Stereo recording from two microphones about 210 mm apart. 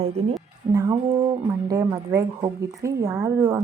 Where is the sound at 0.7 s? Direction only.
15° right (ahead or behind).